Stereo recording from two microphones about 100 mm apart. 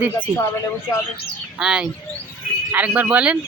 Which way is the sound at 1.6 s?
10° right (ahead or behind).